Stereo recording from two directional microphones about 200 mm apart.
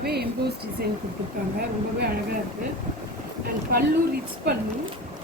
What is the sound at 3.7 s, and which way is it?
Speech, 50° right (ahead or behind).